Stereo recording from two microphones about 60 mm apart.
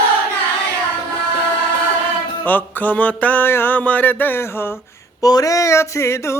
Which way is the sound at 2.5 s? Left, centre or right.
Left.